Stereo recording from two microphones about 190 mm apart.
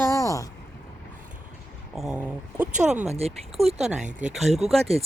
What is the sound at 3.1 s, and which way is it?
Speech, 35° right (ahead or behind).